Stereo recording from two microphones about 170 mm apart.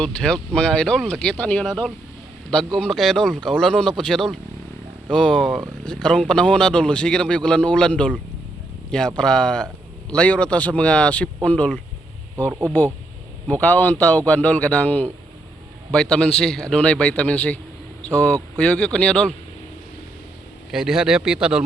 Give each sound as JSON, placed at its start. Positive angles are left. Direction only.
{"t": 0.5, "sound": "speech", "side_deg": 5}
{"t": 12.5, "sound": "speech", "side_deg": -15}
{"t": 13.5, "sound": "speech", "side_deg": 10}
{"t": 20.7, "sound": "speech", "side_deg": -5}